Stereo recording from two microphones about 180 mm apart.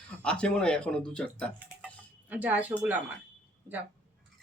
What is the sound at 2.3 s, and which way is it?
Speech, 10° right (ahead or behind).